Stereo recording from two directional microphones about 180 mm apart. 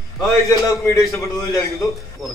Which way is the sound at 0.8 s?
15° left (ahead or behind).